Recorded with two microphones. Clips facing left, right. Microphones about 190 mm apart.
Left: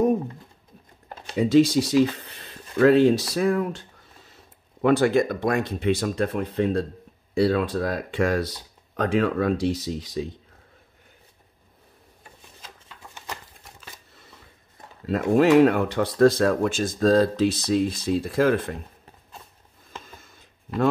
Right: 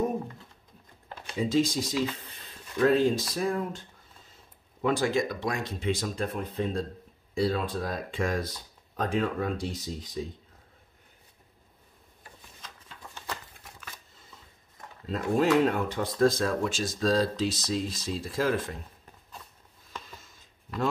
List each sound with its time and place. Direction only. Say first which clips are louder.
1.3 s speech: left 8 dB; 65° left (ahead or behind)
4.8 s speech: left 7 dB; 60° left (ahead or behind); by 10.2 s 90° left
15.0 s speech: left 6 dB; 75° left (ahead or behind); by 18.8 s 60° left (ahead or behind)
20.1 s a sound: left 2 dB; 55° left (ahead or behind)